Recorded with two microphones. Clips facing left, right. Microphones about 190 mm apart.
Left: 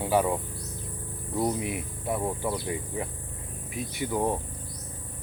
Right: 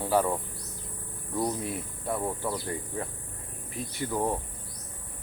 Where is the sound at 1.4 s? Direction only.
15° left (ahead or behind).